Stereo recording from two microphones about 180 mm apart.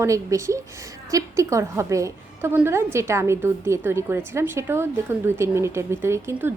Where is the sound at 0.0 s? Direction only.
15° right (ahead or behind).